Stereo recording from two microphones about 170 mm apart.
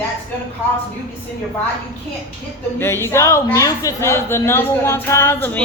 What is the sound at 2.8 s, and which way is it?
Speech, 15° left (ahead or behind).